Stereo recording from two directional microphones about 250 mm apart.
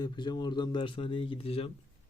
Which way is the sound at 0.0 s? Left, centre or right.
Centre.